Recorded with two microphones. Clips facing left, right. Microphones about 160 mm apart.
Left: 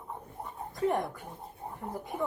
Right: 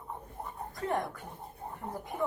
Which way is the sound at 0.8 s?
15° left (ahead or behind).